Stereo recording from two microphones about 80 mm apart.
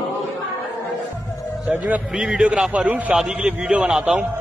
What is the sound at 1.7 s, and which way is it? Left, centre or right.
A man's voice, centre.